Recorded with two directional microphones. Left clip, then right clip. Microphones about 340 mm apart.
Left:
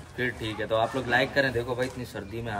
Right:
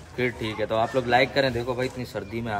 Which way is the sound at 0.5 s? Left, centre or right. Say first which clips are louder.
Right 2 dB; centre.